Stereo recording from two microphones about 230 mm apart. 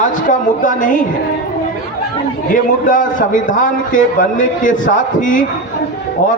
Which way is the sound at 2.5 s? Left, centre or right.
Left.